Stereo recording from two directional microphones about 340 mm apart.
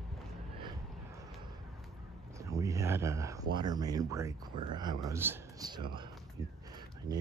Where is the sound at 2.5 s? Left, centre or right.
Centre.